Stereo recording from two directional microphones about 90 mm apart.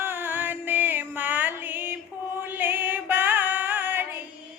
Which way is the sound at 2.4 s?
20° right (ahead or behind).